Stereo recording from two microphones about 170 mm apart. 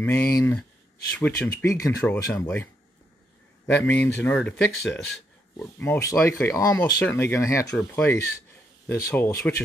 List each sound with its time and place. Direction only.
0.0 s speech: 15° left (ahead or behind)
7.7 s speech: 5° left (ahead or behind)